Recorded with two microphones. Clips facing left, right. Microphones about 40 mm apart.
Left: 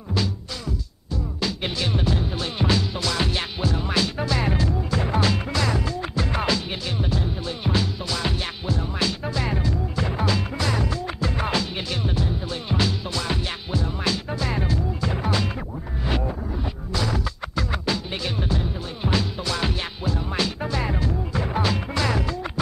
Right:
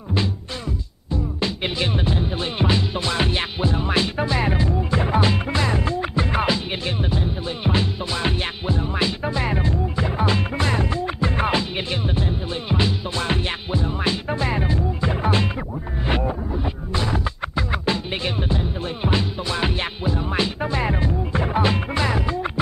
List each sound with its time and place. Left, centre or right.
1.1 s music: right
9.9 s music: centre
10.2 s music: right
13.2 s music: right
13.7 s music: right
16.9 s music: right